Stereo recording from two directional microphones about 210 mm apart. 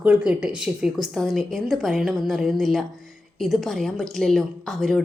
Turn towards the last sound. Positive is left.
turn(degrees=0)  # may be behind; listen again after turning